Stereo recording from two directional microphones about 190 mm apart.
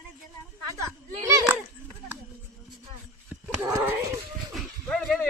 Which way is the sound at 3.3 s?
10° right (ahead or behind).